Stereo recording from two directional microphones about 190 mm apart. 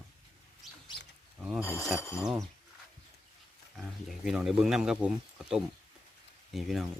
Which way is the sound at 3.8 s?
Centre (ahead or behind).